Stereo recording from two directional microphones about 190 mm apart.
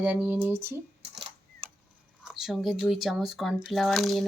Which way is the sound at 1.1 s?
30° right (ahead or behind).